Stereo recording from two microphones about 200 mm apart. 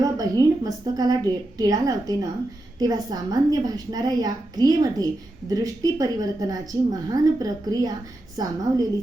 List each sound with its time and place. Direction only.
0.0 s a woman's voice: 20° right (ahead or behind)